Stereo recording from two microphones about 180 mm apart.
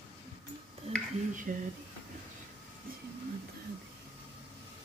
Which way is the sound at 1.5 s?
45° right (ahead or behind).